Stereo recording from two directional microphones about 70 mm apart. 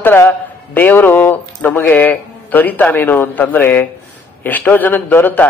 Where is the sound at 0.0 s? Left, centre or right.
Left.